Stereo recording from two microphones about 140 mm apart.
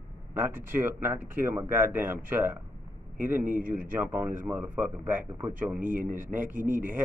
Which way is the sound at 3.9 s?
15° right (ahead or behind).